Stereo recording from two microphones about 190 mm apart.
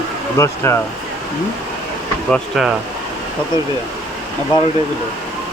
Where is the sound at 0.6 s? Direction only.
15° left (ahead or behind).